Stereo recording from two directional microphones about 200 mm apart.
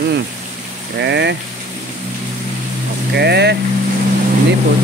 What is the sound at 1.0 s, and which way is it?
Speech, 60° right (ahead or behind).